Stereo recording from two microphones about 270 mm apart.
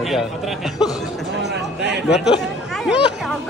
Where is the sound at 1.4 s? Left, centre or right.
Right.